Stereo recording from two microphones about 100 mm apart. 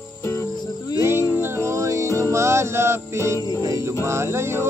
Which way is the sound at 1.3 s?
25° right (ahead or behind).